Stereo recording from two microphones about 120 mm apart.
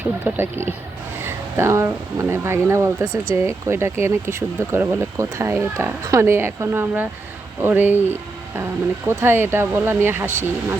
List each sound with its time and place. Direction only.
0.3 s speech: 20° right (ahead or behind)